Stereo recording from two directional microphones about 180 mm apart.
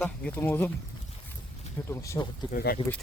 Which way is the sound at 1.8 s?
15° left (ahead or behind).